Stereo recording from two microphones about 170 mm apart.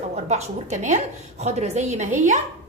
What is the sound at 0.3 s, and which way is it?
A woman's voice, 40° right (ahead or behind).